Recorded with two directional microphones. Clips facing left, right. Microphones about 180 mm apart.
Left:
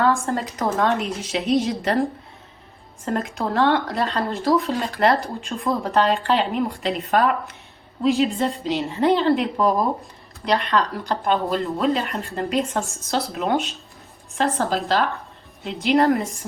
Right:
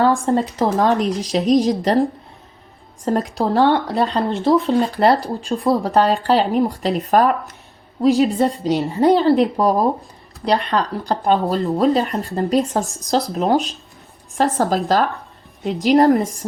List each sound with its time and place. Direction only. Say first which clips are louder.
0.0 s speech: right 5 dB; 30° right (ahead or behind)